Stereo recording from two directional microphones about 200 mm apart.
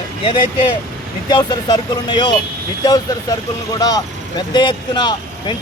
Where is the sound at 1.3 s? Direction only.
20° left (ahead or behind).